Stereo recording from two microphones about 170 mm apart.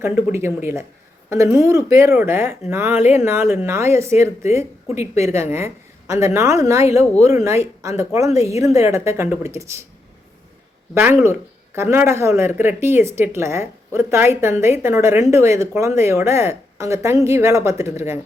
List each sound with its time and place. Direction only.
0.0 s speech: 15° right (ahead or behind)
10.9 s speech: 15° right (ahead or behind)